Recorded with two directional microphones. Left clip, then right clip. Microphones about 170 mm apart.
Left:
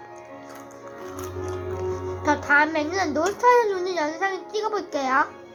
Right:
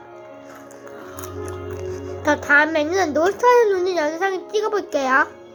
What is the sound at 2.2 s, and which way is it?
A child's voice, 30° right (ahead or behind).